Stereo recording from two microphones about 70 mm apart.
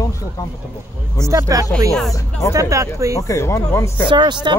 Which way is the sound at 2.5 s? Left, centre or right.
Right.